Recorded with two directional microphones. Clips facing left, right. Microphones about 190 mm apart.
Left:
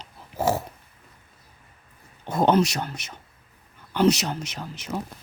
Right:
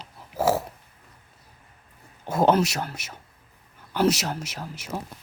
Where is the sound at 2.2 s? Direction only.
5° right (ahead or behind).